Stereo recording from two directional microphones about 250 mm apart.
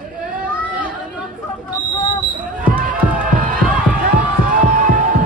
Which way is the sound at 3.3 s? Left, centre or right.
Right.